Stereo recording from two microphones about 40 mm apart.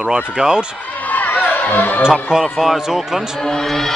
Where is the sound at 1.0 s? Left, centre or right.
Left.